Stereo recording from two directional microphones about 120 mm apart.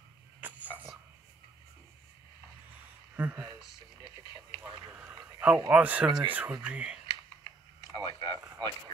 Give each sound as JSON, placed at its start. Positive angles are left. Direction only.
{"t": 0.4, "sound": "cough", "side_deg": -15}
{"t": 3.2, "sound": "speech", "side_deg": -20}
{"t": 4.0, "sound": "radio", "side_deg": -35}
{"t": 5.2, "sound": "a sound", "side_deg": -10}
{"t": 5.7, "sound": "speech", "side_deg": -10}
{"t": 7.9, "sound": "a sound", "side_deg": -35}